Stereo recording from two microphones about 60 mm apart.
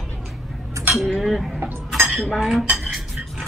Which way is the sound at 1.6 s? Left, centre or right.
Right.